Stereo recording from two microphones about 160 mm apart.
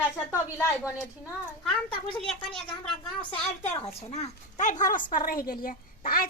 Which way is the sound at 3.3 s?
40° left (ahead or behind).